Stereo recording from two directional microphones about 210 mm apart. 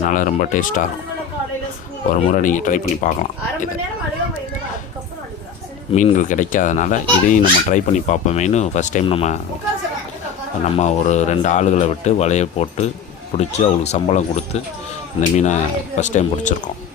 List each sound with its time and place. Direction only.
0.0 s speech: 40° left (ahead or behind)
2.3 s speech: 40° left (ahead or behind)
5.9 s speech: 35° left (ahead or behind)
10.6 s speech: 35° left (ahead or behind)